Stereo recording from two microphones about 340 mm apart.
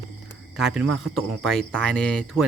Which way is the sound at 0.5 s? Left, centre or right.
Centre.